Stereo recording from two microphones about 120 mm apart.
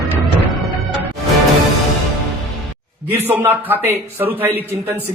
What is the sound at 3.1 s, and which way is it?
A man's voice, 15° right (ahead or behind).